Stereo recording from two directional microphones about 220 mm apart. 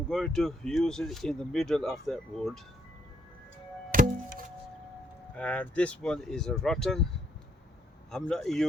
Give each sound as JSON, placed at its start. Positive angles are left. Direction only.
{"t": 0.1, "sound": "speech", "side_deg": 0}
{"t": 3.9, "sound": "music", "side_deg": -40}
{"t": 5.4, "sound": "speech", "side_deg": 5}
{"t": 8.1, "sound": "speech", "side_deg": 5}